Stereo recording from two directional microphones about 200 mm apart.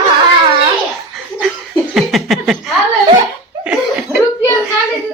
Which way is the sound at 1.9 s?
Centre (ahead or behind).